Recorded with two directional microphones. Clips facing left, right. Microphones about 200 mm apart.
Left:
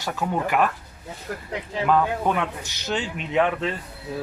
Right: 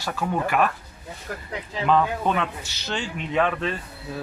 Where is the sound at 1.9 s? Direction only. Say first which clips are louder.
Even; 10° left (ahead or behind).